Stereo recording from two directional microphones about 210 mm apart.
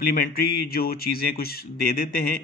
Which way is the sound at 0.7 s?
45° left (ahead or behind).